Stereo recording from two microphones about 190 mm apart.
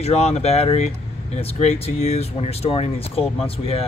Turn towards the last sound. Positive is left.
turn(degrees=30)  # may be behind; listen again after turning